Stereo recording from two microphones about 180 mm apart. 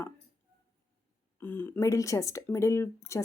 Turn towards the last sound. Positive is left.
turn(degrees=15)  # may be behind; listen again after turning